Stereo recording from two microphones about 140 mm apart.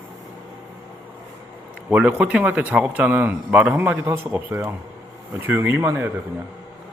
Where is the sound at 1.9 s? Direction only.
10° right (ahead or behind).